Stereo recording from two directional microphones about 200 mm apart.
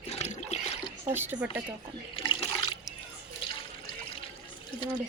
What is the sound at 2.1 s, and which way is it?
Water, 20° left (ahead or behind).